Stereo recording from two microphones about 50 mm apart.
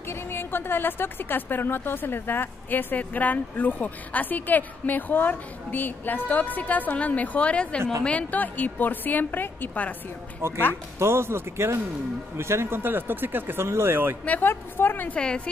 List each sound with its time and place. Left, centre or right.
0.1 s a woman's voice: left
10.4 s speech: right
13.7 s speech: right
14.4 s a woman's voice: left
15.1 s a woman's voice: centre